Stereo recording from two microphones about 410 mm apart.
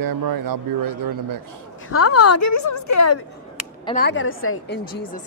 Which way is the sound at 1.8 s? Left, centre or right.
Left.